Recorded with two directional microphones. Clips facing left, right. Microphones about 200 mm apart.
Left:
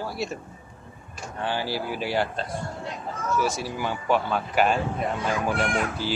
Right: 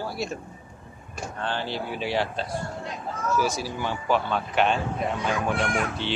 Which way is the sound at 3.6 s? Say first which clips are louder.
Left 1 dB; centre (ahead or behind).